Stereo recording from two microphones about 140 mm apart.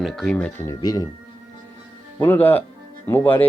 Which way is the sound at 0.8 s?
30° left (ahead or behind).